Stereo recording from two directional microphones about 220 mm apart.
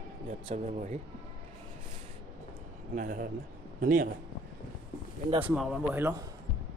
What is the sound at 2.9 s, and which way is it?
Speech, 40° right (ahead or behind).